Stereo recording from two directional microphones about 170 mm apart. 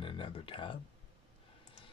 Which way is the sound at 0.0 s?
30° left (ahead or behind).